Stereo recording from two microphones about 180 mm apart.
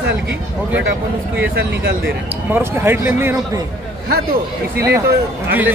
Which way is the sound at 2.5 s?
10° right (ahead or behind).